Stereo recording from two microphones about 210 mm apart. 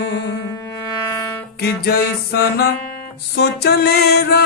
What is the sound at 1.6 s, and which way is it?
Music, 50° left (ahead or behind).